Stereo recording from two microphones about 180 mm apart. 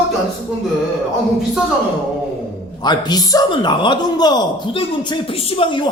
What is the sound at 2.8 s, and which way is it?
A man's voice, 25° left (ahead or behind).